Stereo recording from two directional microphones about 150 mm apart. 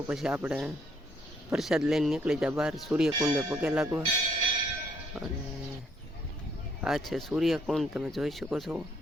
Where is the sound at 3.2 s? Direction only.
20° right (ahead or behind).